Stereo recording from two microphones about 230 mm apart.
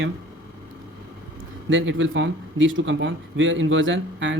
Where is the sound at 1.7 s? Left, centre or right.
Right.